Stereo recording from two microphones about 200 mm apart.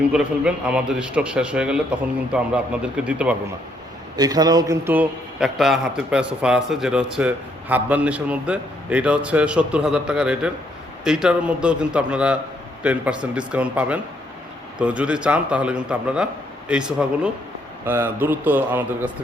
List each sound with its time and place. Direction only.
0.1 s a man's voice: 5° right (ahead or behind)
4.2 s a man's voice: 20° right (ahead or behind)